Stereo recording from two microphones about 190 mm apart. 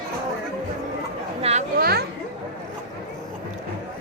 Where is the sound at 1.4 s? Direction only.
35° right (ahead or behind).